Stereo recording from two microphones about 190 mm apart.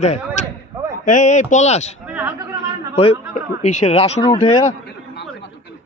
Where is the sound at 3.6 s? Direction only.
35° left (ahead or behind).